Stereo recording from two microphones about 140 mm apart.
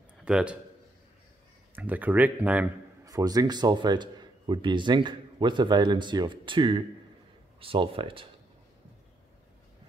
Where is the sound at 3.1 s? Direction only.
25° right (ahead or behind).